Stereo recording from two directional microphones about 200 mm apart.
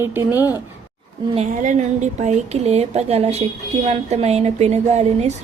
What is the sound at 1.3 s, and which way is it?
A woman's voice, 40° right (ahead or behind).